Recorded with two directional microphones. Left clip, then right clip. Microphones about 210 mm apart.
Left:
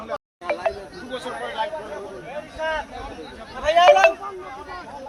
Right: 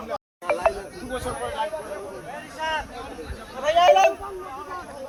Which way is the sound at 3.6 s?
50° left (ahead or behind).